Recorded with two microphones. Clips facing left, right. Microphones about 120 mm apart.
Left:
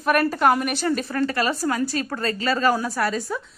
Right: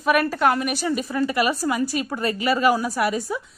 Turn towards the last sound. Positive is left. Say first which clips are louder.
# right 1 dB
turn(degrees=-15)  # may be behind; listen again after turning